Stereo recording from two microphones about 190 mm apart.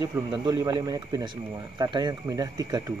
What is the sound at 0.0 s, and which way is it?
Speech, 20° right (ahead or behind).